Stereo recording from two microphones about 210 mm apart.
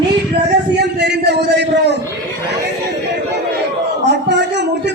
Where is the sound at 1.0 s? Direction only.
55° right (ahead or behind).